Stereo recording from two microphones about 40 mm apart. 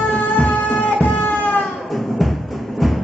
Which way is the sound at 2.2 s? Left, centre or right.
Centre.